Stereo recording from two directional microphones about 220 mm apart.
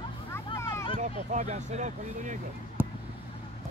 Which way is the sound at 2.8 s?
10° right (ahead or behind).